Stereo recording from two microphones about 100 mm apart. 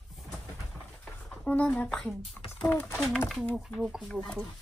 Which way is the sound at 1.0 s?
15° left (ahead or behind).